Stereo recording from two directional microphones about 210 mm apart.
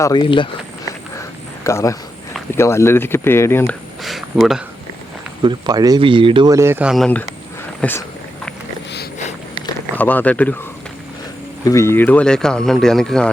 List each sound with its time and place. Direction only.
0.0 s speech: 20° left (ahead or behind)
1.6 s speech: 15° left (ahead or behind)
4.0 s a sound: centre (ahead or behind)
5.4 s speech: 20° right (ahead or behind); by 8.0 s 10° left (ahead or behind)
10.0 s speech: 10° left (ahead or behind)
11.6 s speech: 15° left (ahead or behind)